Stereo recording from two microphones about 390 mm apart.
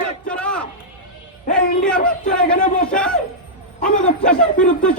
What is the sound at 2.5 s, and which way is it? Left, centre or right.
Speech, centre.